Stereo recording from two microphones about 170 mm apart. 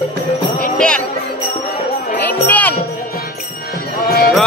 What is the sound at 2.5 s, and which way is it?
Music, 10° left (ahead or behind).